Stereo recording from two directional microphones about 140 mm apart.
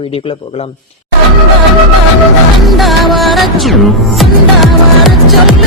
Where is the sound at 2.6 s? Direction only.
Centre (ahead or behind).